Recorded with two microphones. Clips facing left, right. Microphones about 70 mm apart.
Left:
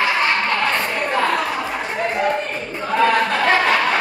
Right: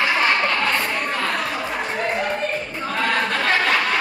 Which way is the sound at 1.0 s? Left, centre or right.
Left.